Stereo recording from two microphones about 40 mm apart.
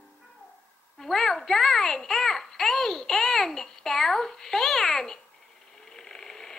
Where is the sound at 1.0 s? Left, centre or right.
Centre.